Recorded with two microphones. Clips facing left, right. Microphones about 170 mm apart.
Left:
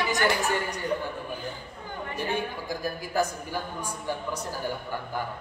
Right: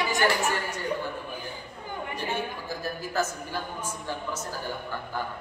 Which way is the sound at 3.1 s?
15° left (ahead or behind).